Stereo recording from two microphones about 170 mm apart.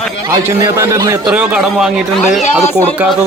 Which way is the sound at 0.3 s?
20° right (ahead or behind).